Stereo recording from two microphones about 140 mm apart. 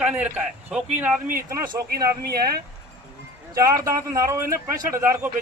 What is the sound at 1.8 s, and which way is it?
Speech, 90° right.